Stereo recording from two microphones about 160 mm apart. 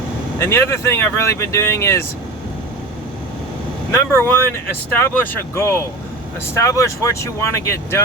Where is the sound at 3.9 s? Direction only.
15° left (ahead or behind).